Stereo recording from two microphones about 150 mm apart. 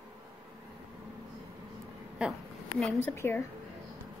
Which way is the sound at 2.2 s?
5° right (ahead or behind).